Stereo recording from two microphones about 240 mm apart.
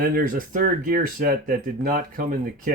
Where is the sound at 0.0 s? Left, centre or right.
Right.